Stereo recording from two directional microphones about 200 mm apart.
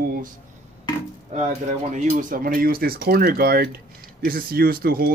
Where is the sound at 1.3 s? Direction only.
35° right (ahead or behind).